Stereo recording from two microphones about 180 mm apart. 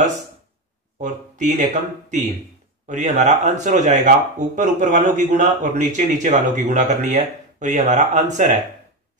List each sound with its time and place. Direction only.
0.9 s speech: 45° right (ahead or behind)